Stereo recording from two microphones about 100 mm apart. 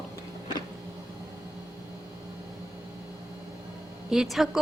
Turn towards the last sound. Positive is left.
turn(degrees=0)  # may be behind; listen again after turning